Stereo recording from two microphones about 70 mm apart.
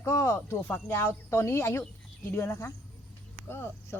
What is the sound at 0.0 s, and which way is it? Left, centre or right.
Speech, left.